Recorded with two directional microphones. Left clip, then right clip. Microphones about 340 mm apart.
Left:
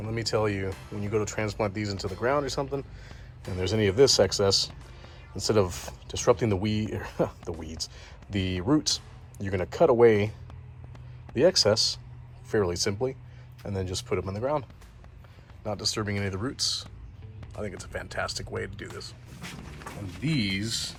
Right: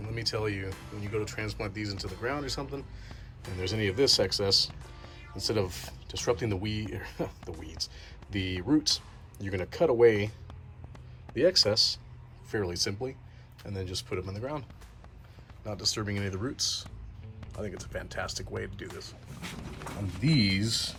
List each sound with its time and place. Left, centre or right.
0.3 s speech: centre
10.9 s a sound: centre
12.5 s speech: centre
15.6 s speech: centre
20.2 s speech: centre